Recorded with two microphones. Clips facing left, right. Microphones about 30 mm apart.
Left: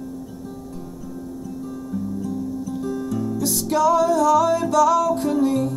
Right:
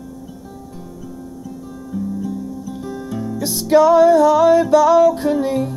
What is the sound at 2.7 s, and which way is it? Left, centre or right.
Music, right.